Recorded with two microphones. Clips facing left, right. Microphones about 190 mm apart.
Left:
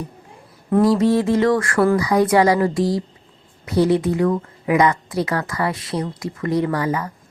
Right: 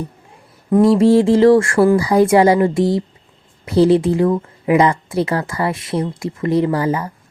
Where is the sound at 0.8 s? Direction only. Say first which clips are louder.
Right 5 dB; 25° right (ahead or behind).